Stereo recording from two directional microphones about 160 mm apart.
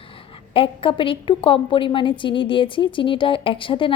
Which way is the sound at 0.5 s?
35° left (ahead or behind).